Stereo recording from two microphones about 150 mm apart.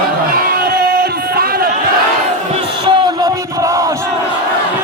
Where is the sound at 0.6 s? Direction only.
90° right.